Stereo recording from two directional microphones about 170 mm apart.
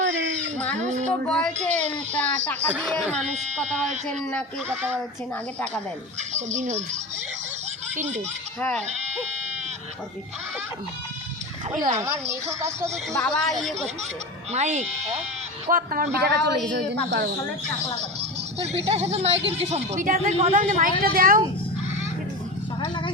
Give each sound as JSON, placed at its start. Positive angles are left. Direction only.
{"t": 0.0, "sound": "a sound", "side_deg": -90}
{"t": 0.8, "sound": "speech", "side_deg": -45}
{"t": 1.2, "sound": "a woman's voice", "side_deg": 5}
{"t": 2.7, "sound": "a woman's voice", "side_deg": -5}
{"t": 6.5, "sound": "speech", "side_deg": -45}
{"t": 7.9, "sound": "speech", "side_deg": -45}
{"t": 11.9, "sound": "speech", "side_deg": -15}
{"t": 13.1, "sound": "a woman's voice", "side_deg": 5}
{"t": 14.5, "sound": "speech", "side_deg": -45}
{"t": 15.7, "sound": "a man's voice", "side_deg": -60}
{"t": 16.2, "sound": "a woman's voice", "side_deg": -80}
{"t": 18.2, "sound": "speech", "side_deg": -40}
{"t": 21.0, "sound": "a man's voice", "side_deg": -60}
{"t": 22.8, "sound": "a sound", "side_deg": 30}